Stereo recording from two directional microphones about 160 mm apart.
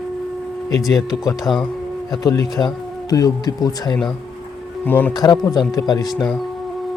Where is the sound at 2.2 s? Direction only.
25° left (ahead or behind).